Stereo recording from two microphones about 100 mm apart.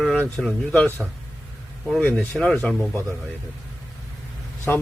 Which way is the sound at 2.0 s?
15° left (ahead or behind).